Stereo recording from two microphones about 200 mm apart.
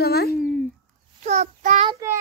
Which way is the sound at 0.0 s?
50° left (ahead or behind).